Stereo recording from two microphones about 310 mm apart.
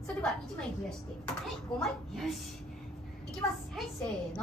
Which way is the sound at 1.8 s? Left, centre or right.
Centre.